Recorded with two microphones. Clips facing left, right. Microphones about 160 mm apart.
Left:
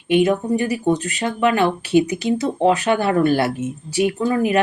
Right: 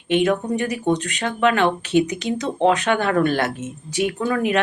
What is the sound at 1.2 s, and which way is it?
Speech, 55° right (ahead or behind).